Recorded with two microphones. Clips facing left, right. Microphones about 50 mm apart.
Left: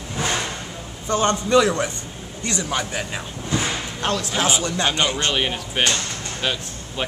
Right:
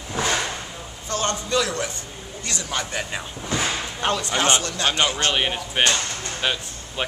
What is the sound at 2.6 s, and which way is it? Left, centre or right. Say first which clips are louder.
Speech: left 2 dB; centre.